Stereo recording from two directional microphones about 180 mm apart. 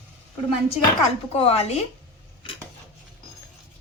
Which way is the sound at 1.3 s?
35° left (ahead or behind).